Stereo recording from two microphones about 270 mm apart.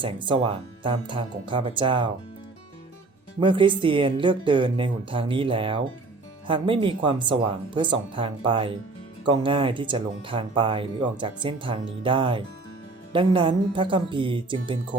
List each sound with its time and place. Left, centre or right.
0.0 s speech: centre
3.4 s speech: centre